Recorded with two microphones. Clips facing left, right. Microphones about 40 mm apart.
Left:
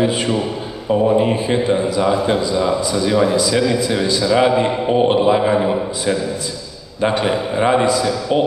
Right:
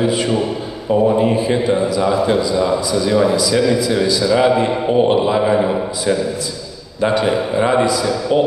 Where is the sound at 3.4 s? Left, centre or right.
Left.